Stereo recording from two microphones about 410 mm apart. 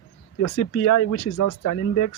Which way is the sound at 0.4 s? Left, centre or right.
Left.